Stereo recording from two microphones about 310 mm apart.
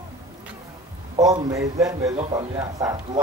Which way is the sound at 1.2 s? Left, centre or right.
Centre.